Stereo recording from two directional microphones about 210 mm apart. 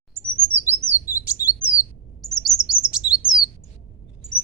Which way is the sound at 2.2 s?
Centre (ahead or behind).